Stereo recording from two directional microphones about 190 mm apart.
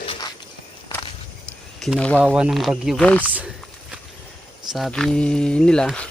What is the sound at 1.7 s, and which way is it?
Speech, centre (ahead or behind).